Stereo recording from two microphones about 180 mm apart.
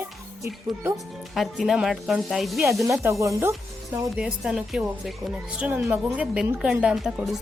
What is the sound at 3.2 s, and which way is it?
Speech, 15° right (ahead or behind).